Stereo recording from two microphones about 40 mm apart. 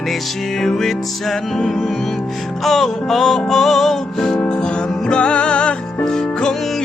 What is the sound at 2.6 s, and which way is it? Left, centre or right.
Music, centre.